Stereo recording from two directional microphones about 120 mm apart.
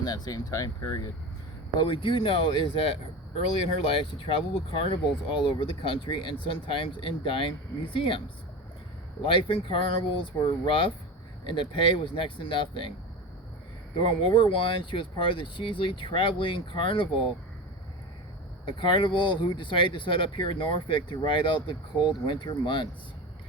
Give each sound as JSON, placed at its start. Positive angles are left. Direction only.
{"t": 0.0, "sound": "speech", "side_deg": 35}
{"t": 1.8, "sound": "speech", "side_deg": 45}
{"t": 9.2, "sound": "speech", "side_deg": 45}
{"t": 14.0, "sound": "speech", "side_deg": 45}
{"t": 18.6, "sound": "speech", "side_deg": 45}